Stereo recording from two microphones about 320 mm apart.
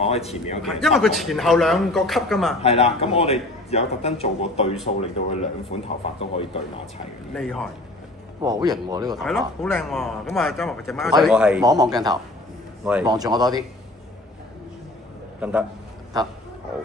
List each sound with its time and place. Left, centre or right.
0.0 s a man's voice: centre
0.6 s a man's voice: centre
2.6 s a man's voice: centre
7.3 s a man's voice: centre
8.4 s speech: centre
9.2 s a man's voice: centre